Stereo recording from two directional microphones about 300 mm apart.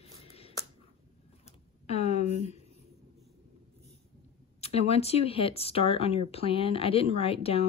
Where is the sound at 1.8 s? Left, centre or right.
Left.